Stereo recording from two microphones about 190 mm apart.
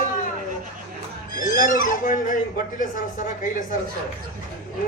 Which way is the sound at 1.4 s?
45° left (ahead or behind).